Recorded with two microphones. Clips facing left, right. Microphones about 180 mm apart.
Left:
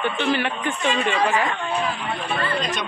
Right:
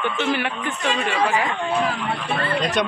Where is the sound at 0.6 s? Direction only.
5° right (ahead or behind).